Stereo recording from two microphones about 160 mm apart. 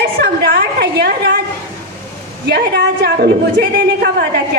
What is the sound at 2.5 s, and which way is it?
Speech, 90° right.